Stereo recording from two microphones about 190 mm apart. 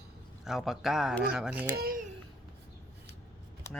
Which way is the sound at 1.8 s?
50° right (ahead or behind).